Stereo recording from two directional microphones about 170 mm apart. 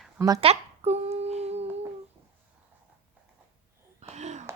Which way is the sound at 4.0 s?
40° right (ahead or behind).